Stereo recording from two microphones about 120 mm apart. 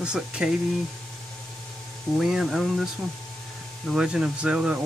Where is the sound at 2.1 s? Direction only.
5° right (ahead or behind).